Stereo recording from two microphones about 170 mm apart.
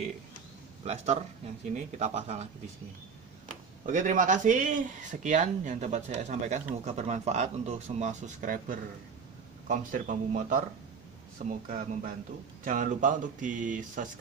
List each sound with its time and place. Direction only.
0.8 s speech: 40° right (ahead or behind)
3.8 s speech: 50° right (ahead or behind)